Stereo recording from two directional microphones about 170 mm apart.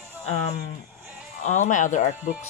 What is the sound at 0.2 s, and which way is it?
Speech, 40° left (ahead or behind).